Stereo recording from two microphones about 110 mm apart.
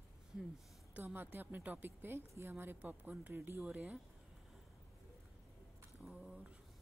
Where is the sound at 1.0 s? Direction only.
20° right (ahead or behind).